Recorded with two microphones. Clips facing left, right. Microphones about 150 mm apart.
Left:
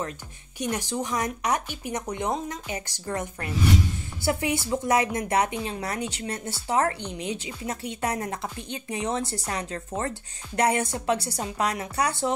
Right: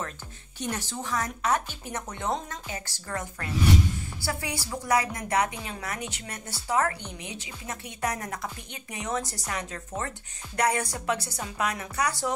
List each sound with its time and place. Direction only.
0.6 s a woman's voice: 15° left (ahead or behind)